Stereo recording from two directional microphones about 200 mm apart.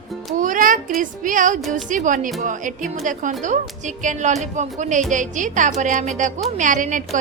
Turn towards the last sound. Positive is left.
turn(degrees=-40)  # may be behind; listen again after turning